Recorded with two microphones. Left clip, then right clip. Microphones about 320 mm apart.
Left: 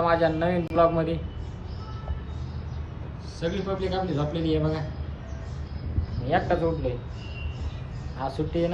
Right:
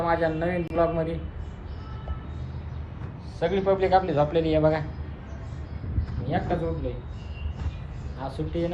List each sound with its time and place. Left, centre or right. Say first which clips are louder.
0.0 s a man's voice: left 2 dB; centre
3.4 s a man's voice: right 6 dB; centre
6.2 s a man's voice: left 4 dB; centre
8.2 s a man's voice: left 3 dB; centre